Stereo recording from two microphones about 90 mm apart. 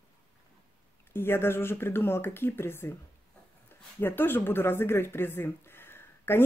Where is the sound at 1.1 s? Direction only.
25° left (ahead or behind).